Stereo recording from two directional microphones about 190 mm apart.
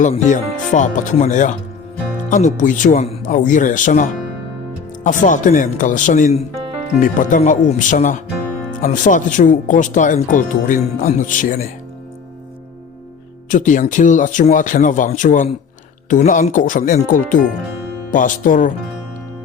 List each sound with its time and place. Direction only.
0.0 s speech: 40° left (ahead or behind)
13.5 s speech: 40° left (ahead or behind)